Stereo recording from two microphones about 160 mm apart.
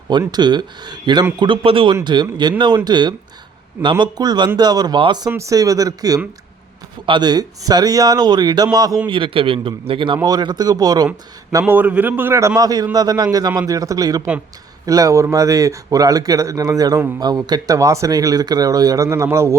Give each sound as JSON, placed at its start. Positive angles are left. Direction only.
{"t": 0.1, "sound": "a man's voice", "side_deg": -25}
{"t": 11.6, "sound": "a man's voice", "side_deg": -10}